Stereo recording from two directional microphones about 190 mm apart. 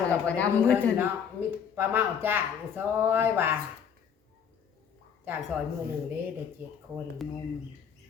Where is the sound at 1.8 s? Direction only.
10° right (ahead or behind).